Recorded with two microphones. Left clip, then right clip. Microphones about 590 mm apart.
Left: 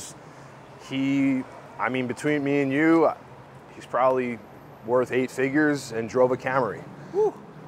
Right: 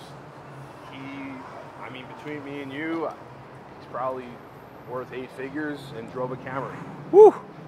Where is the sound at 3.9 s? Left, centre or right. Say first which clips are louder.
Left 8 dB; left.